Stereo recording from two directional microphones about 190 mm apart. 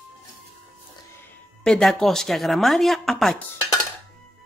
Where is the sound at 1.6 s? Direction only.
5° left (ahead or behind).